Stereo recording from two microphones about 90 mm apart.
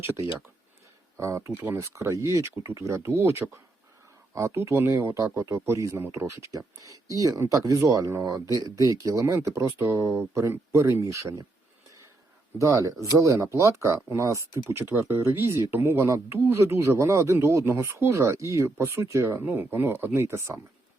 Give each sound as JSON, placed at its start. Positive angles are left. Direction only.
{"t": 0.0, "sound": "speech", "side_deg": -25}
{"t": 12.5, "sound": "speech", "side_deg": -35}